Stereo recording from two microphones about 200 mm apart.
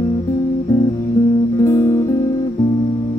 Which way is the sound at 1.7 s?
15° left (ahead or behind).